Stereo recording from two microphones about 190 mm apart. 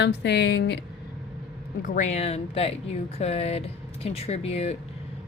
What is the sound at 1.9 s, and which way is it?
Speech, 40° left (ahead or behind).